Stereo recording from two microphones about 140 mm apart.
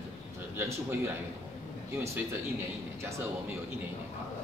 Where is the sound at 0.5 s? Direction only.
15° right (ahead or behind).